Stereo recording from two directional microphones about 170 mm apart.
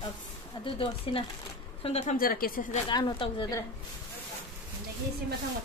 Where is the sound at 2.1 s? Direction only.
60° left (ahead or behind).